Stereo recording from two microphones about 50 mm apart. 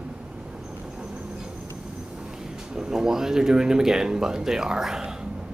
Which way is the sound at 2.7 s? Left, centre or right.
Centre.